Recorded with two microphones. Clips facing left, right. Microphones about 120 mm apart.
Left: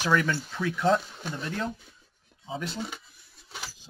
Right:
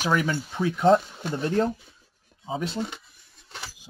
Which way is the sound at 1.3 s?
35° right (ahead or behind).